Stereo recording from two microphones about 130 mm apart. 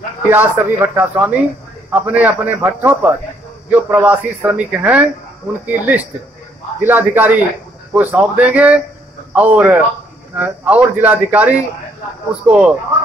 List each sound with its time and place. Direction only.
0.3 s a man's voice: 15° right (ahead or behind)